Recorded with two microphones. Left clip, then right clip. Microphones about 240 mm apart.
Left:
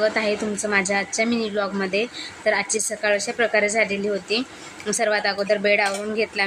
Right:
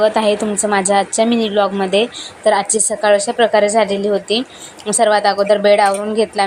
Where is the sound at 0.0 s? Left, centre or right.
Centre.